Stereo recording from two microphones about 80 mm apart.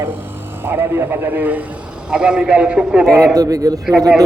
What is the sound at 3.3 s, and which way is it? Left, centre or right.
Speech, right.